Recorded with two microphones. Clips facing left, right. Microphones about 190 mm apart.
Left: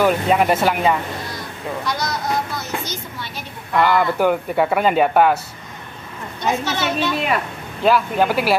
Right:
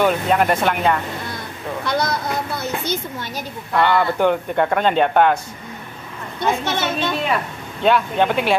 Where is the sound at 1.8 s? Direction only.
55° right (ahead or behind).